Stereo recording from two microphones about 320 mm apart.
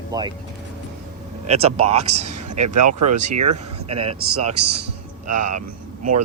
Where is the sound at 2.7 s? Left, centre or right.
Right.